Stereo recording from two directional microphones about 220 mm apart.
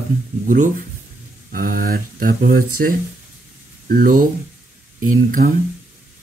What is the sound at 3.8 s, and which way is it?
Speech, 40° right (ahead or behind).